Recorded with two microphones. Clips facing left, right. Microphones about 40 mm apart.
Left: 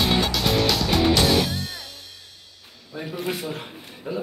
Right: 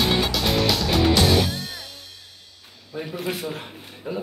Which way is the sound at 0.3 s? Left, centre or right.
Centre.